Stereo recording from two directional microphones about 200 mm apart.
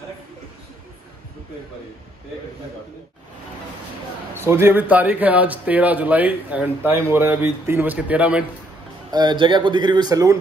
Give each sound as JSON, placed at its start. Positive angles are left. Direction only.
{"t": 4.4, "sound": "speech", "side_deg": -10}
{"t": 9.1, "sound": "speech", "side_deg": -20}